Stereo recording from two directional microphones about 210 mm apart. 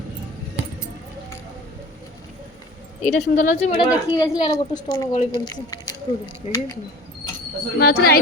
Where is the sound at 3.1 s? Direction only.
35° left (ahead or behind).